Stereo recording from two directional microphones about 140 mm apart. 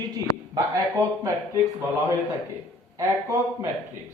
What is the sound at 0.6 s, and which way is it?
Speech, 20° right (ahead or behind).